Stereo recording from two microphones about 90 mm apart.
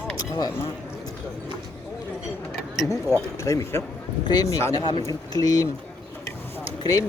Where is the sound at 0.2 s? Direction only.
45° left (ahead or behind).